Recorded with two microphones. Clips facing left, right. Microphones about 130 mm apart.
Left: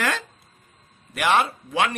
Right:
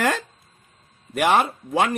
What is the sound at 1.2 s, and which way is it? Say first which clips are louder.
Speech: right 2 dB; 40° right (ahead or behind).